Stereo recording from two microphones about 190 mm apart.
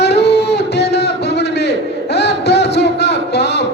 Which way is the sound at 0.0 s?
65° left (ahead or behind).